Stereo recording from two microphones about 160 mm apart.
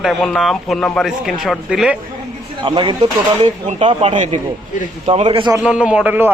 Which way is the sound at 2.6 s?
30° right (ahead or behind).